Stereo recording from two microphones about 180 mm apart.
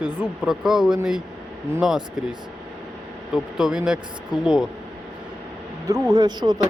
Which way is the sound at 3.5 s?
5° right (ahead or behind).